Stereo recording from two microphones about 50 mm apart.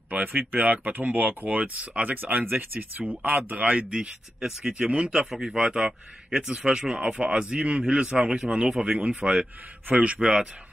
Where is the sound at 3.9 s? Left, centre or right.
Centre.